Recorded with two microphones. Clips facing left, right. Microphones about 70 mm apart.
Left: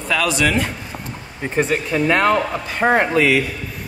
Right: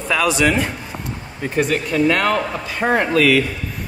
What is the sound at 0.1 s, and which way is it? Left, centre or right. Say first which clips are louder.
Speech: right 1 dB; centre.